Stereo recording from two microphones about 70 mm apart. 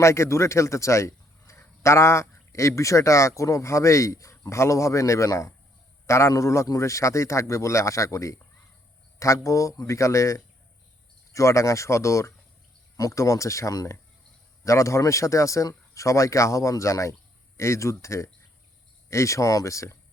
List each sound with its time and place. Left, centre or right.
0.0 s a man's voice: left